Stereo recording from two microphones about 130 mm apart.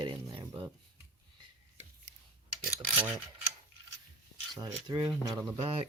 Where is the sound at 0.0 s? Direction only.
35° right (ahead or behind).